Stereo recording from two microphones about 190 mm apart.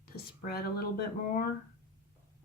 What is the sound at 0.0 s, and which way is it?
Speech, 55° left (ahead or behind).